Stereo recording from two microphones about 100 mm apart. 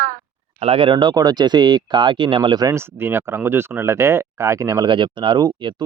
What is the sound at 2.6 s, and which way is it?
Speech, 30° right (ahead or behind).